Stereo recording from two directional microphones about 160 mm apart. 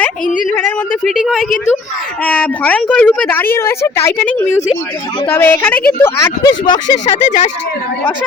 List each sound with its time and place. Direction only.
1.0 s speech: centre (ahead or behind)
2.2 s a woman's voice: 10° left (ahead or behind); by 7.1 s 25° left (ahead or behind)
7.2 s speech: 50° left (ahead or behind)